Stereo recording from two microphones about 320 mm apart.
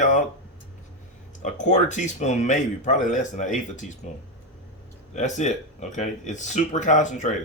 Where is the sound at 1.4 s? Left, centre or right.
Left.